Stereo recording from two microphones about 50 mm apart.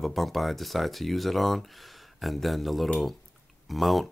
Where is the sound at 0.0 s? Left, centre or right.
Centre.